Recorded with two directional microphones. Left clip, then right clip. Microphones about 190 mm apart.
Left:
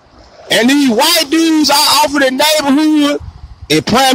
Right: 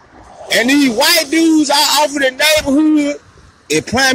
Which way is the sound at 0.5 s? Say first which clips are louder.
Left 2 dB; 30° left (ahead or behind).